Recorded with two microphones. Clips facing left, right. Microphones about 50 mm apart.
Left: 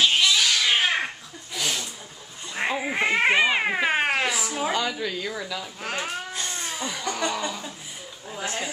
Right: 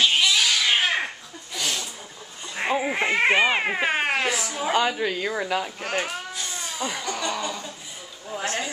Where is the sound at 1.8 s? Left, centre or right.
Centre.